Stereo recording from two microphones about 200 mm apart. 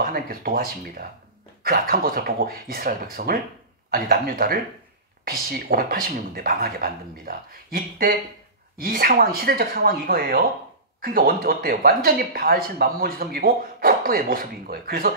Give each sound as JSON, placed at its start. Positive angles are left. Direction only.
{"t": 0.0, "sound": "speech", "side_deg": -50}